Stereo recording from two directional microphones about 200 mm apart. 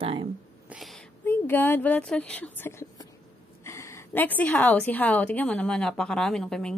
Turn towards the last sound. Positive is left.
turn(degrees=5)  # may be behind; listen again after turning